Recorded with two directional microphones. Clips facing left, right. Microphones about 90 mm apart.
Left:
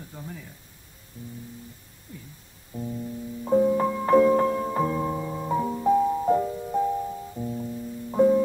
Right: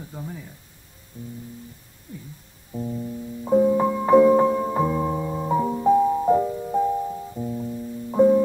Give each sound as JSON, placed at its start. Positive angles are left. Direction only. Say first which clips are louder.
{"t": 0.0, "sound": "speech", "louder": "right 4 dB", "side_deg": -15}
{"t": 1.1, "sound": "music", "louder": "right 3 dB", "side_deg": -20}
{"t": 2.7, "sound": "music", "louder": "right 3 dB", "side_deg": -15}